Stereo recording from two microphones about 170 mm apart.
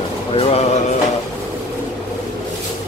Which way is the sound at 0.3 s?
35° left (ahead or behind).